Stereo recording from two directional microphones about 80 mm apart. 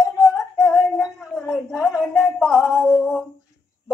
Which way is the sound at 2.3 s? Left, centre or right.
Centre.